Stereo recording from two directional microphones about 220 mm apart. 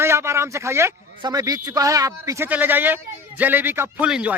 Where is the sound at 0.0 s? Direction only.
10° right (ahead or behind).